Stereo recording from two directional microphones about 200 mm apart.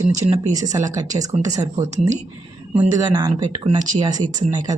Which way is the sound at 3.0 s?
20° right (ahead or behind).